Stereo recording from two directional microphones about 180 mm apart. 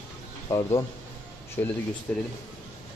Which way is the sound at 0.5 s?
15° left (ahead or behind).